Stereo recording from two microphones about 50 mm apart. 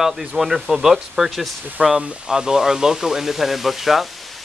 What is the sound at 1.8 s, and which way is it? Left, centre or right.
Speech, right.